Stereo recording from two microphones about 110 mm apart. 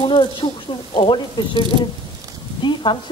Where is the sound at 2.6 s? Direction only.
45° left (ahead or behind).